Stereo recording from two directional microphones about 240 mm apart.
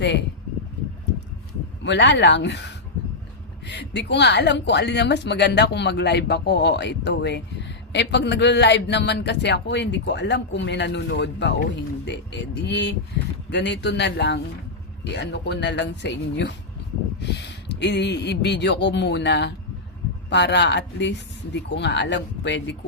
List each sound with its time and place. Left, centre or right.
1.8 s speech: left